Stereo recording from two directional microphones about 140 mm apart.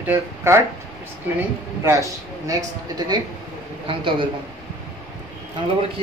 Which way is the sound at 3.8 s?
35° right (ahead or behind).